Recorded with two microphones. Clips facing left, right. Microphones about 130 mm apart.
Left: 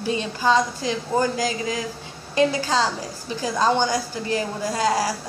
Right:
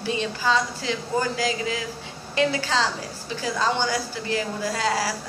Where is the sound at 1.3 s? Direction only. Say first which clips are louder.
Left 1 dB; 40° left (ahead or behind).